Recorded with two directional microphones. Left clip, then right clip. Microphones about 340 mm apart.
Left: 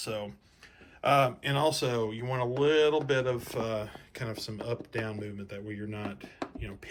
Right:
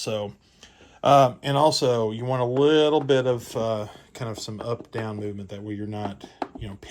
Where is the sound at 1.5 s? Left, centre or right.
Centre.